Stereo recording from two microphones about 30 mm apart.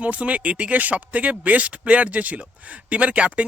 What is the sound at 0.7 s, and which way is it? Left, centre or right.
Speech, right.